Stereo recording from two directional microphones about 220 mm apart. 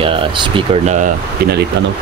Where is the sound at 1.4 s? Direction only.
45° right (ahead or behind).